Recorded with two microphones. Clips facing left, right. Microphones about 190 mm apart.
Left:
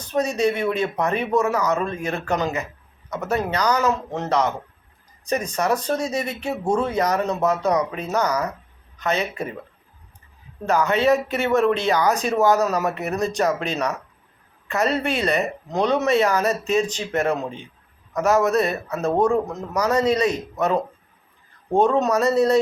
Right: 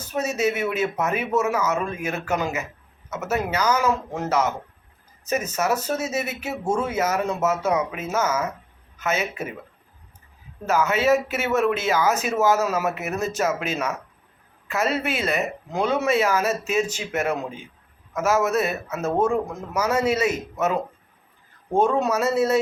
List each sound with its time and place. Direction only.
0.0 s speech: 5° right (ahead or behind)
10.7 s speech: 5° right (ahead or behind)
17.0 s speech: 35° left (ahead or behind)
17.2 s a man's voice: 5° right (ahead or behind)
21.8 s speech: 10° right (ahead or behind)